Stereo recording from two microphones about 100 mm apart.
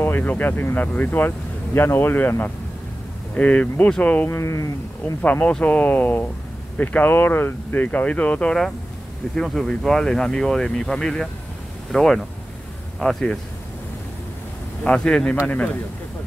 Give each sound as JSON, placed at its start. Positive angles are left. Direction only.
{"t": 0.0, "sound": "speech", "side_deg": 20}
{"t": 4.4, "sound": "speech", "side_deg": 30}
{"t": 5.0, "sound": "speech", "side_deg": 15}
{"t": 14.8, "sound": "speech", "side_deg": 5}